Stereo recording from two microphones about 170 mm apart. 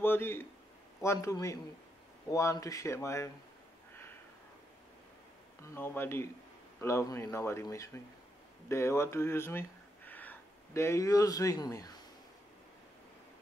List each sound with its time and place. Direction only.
0.0 s a man's voice: 15° left (ahead or behind)
5.8 s speech: 15° left (ahead or behind)